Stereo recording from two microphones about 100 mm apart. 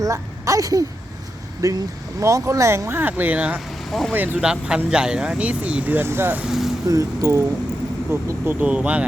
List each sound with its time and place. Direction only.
0.0 s speech: 35° right (ahead or behind)
4.4 s speech: 10° right (ahead or behind)
6.4 s vehicle: 5° right (ahead or behind)
6.8 s speech: 35° right (ahead or behind); by 9.0 s 10° right (ahead or behind)